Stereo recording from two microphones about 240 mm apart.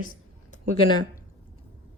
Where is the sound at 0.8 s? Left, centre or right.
Centre.